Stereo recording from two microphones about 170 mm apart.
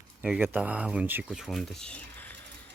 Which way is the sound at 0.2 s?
10° right (ahead or behind).